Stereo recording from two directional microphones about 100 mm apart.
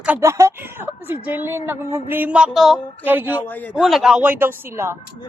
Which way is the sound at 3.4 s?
15° left (ahead or behind).